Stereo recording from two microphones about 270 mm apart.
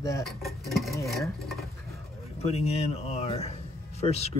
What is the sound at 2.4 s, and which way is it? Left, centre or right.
Speech, left.